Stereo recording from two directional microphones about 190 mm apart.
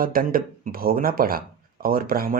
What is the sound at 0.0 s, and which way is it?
Speech, 50° right (ahead or behind).